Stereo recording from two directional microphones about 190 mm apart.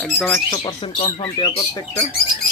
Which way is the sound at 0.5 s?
25° left (ahead or behind).